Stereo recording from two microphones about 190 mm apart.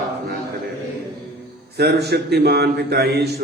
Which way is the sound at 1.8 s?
60° right (ahead or behind).